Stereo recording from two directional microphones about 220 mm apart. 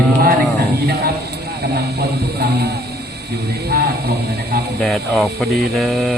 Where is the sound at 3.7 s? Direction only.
45° right (ahead or behind).